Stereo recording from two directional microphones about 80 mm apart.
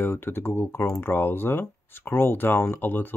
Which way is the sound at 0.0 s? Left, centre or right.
Left.